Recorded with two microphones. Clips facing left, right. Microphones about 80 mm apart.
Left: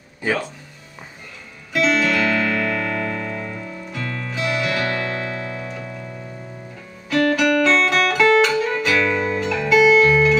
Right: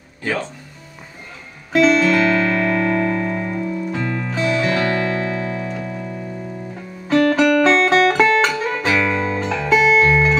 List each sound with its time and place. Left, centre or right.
0.2 s speech: centre
1.7 s music: right
7.1 s music: right